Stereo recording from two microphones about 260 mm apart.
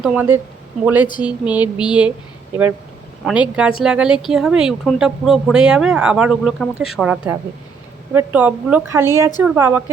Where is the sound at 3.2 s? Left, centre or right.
Centre.